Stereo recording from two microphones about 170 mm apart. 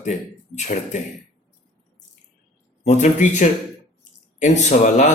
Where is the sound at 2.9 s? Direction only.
45° left (ahead or behind).